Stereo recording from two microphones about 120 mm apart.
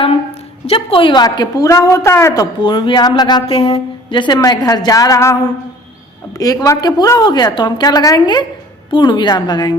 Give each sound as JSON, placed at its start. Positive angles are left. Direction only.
{"t": 0.7, "sound": "a woman's voice", "side_deg": 50}
{"t": 3.4, "sound": "a woman's voice", "side_deg": 50}
{"t": 4.4, "sound": "a woman's voice", "side_deg": 30}